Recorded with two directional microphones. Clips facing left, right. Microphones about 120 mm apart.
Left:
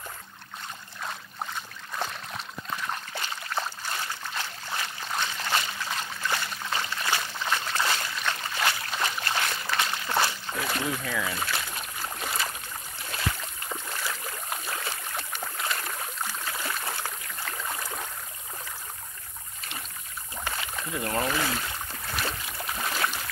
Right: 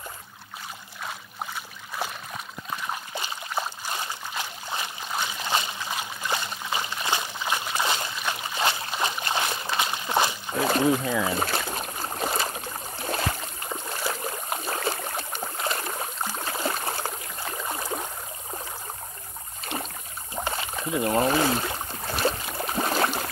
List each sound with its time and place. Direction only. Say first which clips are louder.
1.0 s a sound: even; 5° right (ahead or behind)
2.9 s trickle: right 1 dB; 15° right (ahead or behind)
10.6 s speech: right 9 dB; 30° right (ahead or behind)
11.3 s boat: right 5 dB; 40° right (ahead or behind)
14.8 s boat: right 7 dB; 45° right (ahead or behind)
15.1 s a sound: right 3 dB; 30° right (ahead or behind)
17.5 s boat: right 4 dB; 20° right (ahead or behind)
20.3 s rowboat: right 4 dB; 30° right (ahead or behind)
21.7 s boat: right 3 dB; 30° right (ahead or behind)